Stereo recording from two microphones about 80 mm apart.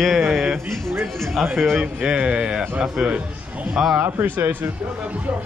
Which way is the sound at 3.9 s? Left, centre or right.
Right.